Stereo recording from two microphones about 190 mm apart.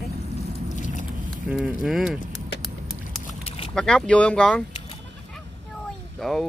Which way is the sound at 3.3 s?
30° left (ahead or behind).